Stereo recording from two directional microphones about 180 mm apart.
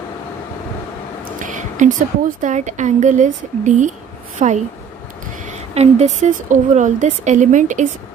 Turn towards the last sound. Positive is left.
turn(degrees=-45)  # may be behind; listen again after turning